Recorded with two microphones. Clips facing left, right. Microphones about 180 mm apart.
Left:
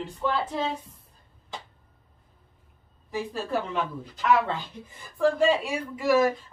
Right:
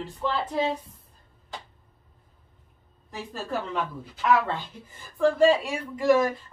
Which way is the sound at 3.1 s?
5° left (ahead or behind).